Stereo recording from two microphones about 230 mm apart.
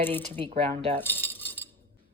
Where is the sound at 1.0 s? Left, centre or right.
Centre.